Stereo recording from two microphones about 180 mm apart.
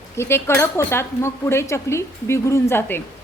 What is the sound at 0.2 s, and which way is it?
A woman's voice, 15° left (ahead or behind).